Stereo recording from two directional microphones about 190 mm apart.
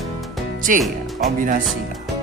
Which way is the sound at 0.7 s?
45° right (ahead or behind).